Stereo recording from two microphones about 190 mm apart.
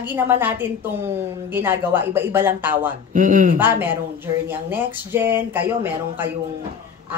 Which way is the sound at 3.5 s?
10° right (ahead or behind).